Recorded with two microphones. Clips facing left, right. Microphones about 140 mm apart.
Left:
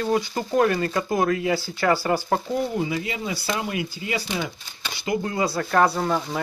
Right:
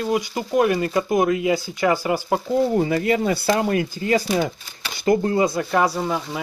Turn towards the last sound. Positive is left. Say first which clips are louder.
# even
turn(degrees=-5)  # may be behind; listen again after turning